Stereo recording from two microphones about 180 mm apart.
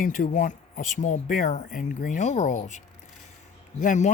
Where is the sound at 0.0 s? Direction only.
50° left (ahead or behind).